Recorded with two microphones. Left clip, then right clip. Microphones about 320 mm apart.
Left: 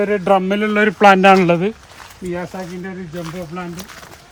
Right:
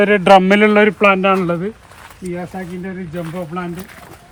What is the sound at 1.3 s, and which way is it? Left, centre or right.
Speech, centre.